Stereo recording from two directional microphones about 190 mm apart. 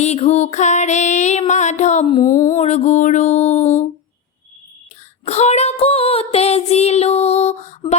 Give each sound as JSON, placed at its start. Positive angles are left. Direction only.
{"t": 0.0, "sound": "music", "side_deg": 35}
{"t": 5.2, "sound": "child singing", "side_deg": 35}